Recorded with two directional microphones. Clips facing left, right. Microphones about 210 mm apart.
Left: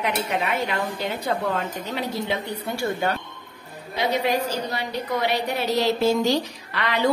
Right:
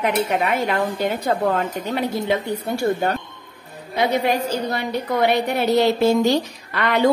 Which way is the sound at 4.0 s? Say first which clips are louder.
Right 3 dB; 55° right (ahead or behind).